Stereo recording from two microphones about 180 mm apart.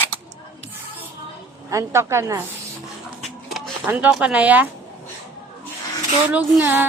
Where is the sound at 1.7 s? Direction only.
15° right (ahead or behind).